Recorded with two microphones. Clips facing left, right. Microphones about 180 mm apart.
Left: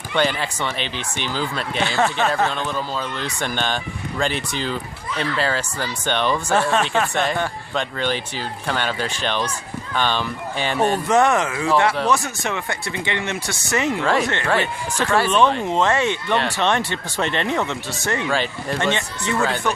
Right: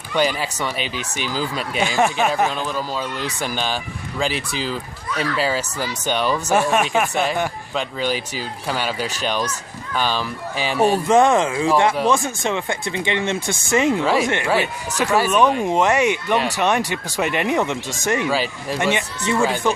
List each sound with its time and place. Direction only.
0.1 s speech: 10° right (ahead or behind)
11.1 s speech: 20° right (ahead or behind)
18.3 s speech: 5° right (ahead or behind)